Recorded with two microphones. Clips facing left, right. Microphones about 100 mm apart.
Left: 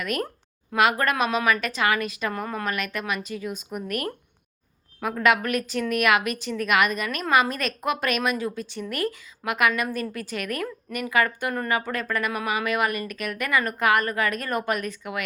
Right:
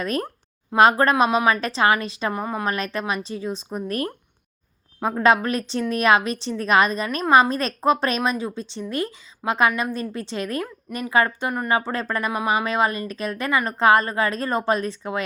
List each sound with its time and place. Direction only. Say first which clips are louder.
0.0 s a woman's voice: right 3 dB; 30° right (ahead or behind)